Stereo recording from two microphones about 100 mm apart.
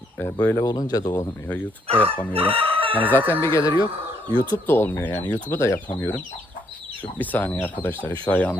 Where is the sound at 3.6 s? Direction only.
45° left (ahead or behind).